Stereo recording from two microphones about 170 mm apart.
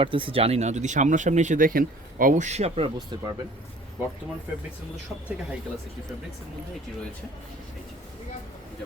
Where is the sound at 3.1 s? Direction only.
25° right (ahead or behind).